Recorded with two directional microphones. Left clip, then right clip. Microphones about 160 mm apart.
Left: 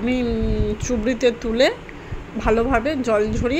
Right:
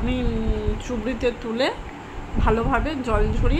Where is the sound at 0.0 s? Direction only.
25° left (ahead or behind).